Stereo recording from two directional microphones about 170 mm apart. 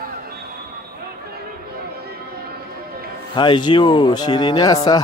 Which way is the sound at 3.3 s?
25° left (ahead or behind).